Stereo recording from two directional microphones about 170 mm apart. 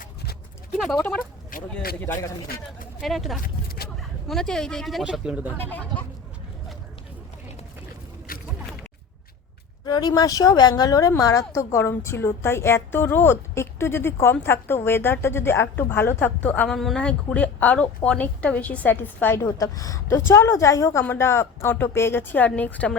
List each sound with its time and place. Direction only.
0.0 s clip-clop: 65° left (ahead or behind)
0.8 s speech: centre (ahead or behind)
1.2 s a sound: 55° left (ahead or behind)
3.0 s speech: centre (ahead or behind)
3.4 s vehicle: 65° left (ahead or behind)
4.3 s speech: centre (ahead or behind)
5.5 s a woman's voice: 10° left (ahead or behind)
8.3 s a sound: 60° left (ahead or behind)
9.8 s a woman's voice: 25° left (ahead or behind)